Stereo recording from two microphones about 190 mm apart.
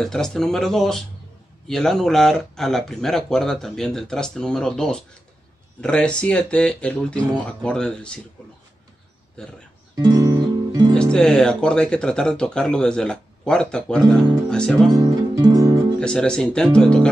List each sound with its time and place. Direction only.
0.0 s speech: centre (ahead or behind)
9.4 s speech: 5° left (ahead or behind)
9.9 s music: 20° right (ahead or behind)
11.0 s speech: 5° left (ahead or behind)
14.9 s music: 20° right (ahead or behind)
16.0 s speech: 5° left (ahead or behind)